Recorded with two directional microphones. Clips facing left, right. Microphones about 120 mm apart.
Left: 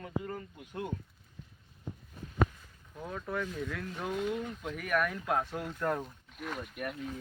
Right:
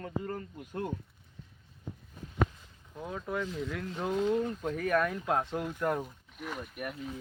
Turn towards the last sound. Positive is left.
turn(degrees=0)  # may be behind; listen again after turning